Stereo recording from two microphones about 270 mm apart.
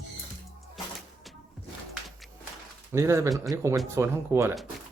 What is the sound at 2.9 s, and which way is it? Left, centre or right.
Speech, centre.